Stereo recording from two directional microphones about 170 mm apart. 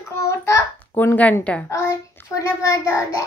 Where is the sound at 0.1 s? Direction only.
15° left (ahead or behind).